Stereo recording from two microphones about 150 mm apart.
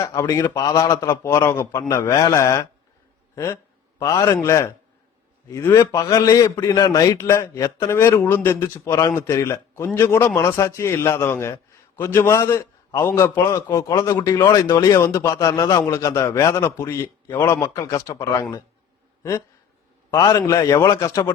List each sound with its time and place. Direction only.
0.0 s a man's voice: 20° left (ahead or behind)
20.1 s a man's voice: 25° left (ahead or behind)